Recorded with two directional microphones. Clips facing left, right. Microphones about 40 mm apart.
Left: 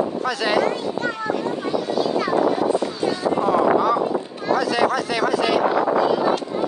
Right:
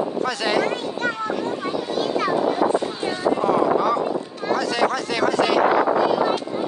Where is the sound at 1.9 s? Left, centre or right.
Right.